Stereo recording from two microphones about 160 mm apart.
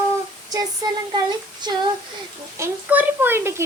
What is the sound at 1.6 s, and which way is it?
Speech, 25° right (ahead or behind).